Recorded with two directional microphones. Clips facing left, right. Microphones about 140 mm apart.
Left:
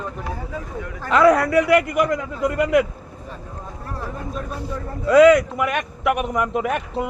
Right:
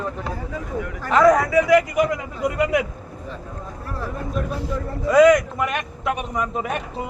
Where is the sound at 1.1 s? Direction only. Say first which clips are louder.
Even; 65° left (ahead or behind).